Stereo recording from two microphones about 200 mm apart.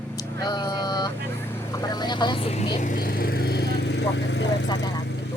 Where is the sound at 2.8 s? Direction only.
45° left (ahead or behind); by 4.7 s 65° left (ahead or behind).